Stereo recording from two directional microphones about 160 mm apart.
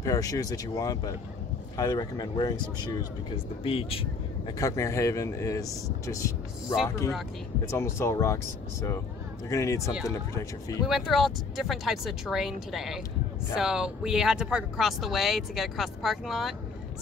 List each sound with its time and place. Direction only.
0.0 s speech: 20° left (ahead or behind); by 4.6 s 35° left (ahead or behind)
4.6 s speech: 20° left (ahead or behind)
7.6 s speech: 15° left (ahead or behind)
9.5 s speech: 20° left (ahead or behind)
10.9 s speech: centre (ahead or behind)